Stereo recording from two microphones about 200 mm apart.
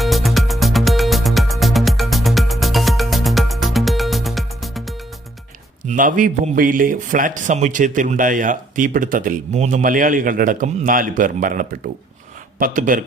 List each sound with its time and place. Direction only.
0.0 s music: centre (ahead or behind)
5.8 s a man's voice: 40° right (ahead or behind)